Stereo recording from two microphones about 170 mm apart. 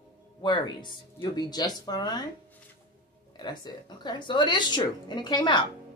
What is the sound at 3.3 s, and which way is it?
A woman's voice, 25° left (ahead or behind).